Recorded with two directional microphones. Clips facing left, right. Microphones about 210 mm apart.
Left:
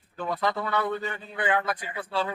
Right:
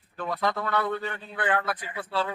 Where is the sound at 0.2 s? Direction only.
5° left (ahead or behind).